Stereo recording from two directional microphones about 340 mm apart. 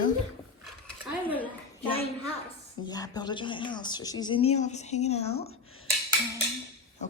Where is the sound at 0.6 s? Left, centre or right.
Centre.